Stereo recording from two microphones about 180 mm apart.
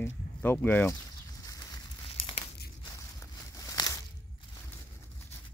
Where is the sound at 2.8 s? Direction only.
20° left (ahead or behind).